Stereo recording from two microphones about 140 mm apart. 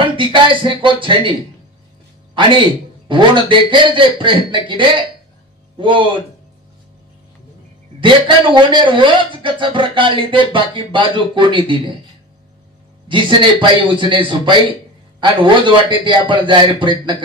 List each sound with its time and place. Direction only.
0.0 s a sound: 35° right (ahead or behind)
0.6 s speech: 35° right (ahead or behind)
3.1 s speech: 35° right (ahead or behind)
8.0 s speech: 35° right (ahead or behind)
13.1 s speech: 35° right (ahead or behind)